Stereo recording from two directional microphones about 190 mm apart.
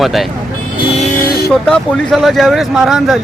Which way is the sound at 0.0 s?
Centre (ahead or behind).